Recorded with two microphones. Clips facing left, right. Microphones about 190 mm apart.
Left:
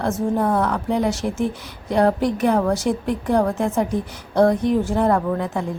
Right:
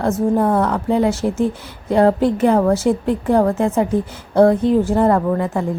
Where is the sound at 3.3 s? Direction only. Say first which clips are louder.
Right 4 dB; 5° right (ahead or behind).